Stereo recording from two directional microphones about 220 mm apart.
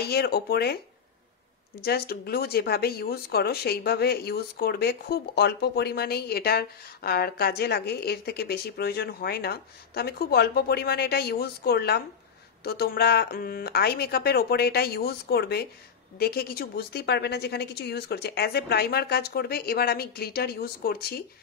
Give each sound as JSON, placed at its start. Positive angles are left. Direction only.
{"t": 0.0, "sound": "speech", "side_deg": 45}
{"t": 1.8, "sound": "speech", "side_deg": 45}